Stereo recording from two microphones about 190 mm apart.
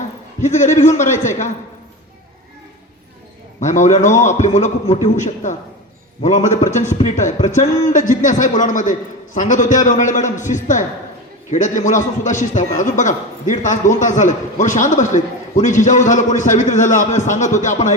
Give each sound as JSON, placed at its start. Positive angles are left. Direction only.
{"t": 0.4, "sound": "a man's voice", "side_deg": 40}
{"t": 3.6, "sound": "a man's voice", "side_deg": 40}